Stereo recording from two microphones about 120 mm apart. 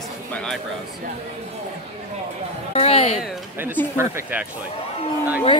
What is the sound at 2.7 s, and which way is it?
Music, 55° left (ahead or behind).